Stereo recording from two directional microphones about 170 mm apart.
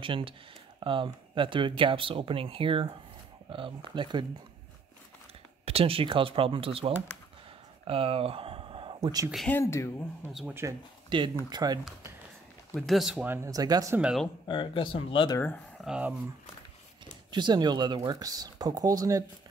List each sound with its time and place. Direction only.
0.0 s speech: 30° right (ahead or behind)
5.7 s speech: 35° right (ahead or behind)
7.8 s a sound: 35° right (ahead or behind)
9.5 s speech: 15° left (ahead or behind)
10.3 s speech: 10° right (ahead or behind)
11.1 s speech: 25° right (ahead or behind)
12.7 s speech: centre (ahead or behind)
13.3 s speech: 20° right (ahead or behind)
13.9 s speech: 5° right (ahead or behind)
14.5 s speech: 30° left (ahead or behind)
15.3 s speech: 10° left (ahead or behind)
15.8 s speech: 5° right (ahead or behind)
17.3 s speech: 25° right (ahead or behind)